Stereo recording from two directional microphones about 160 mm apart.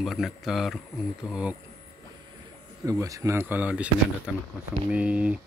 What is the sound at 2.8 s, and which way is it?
Speech, 20° right (ahead or behind).